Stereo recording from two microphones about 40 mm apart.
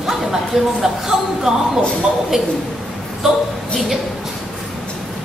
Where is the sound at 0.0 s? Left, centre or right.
Centre.